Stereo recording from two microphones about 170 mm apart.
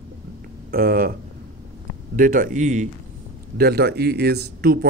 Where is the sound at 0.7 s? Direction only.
60° right (ahead or behind).